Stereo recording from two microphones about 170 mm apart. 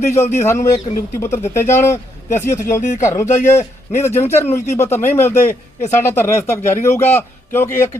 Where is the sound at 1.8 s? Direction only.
15° left (ahead or behind).